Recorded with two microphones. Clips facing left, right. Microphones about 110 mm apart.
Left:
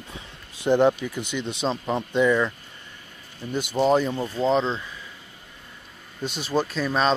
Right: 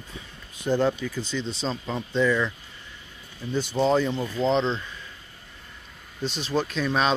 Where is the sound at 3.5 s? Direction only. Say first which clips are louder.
Left 2 dB; 10° left (ahead or behind).